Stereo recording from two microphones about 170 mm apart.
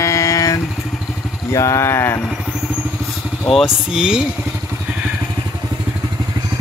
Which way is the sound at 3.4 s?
Centre (ahead or behind).